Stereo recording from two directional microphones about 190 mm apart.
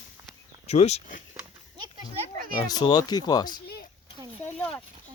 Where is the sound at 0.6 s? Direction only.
35° left (ahead or behind).